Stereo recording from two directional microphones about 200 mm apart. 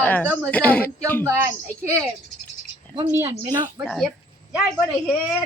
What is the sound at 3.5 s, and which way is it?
Speech, 15° right (ahead or behind).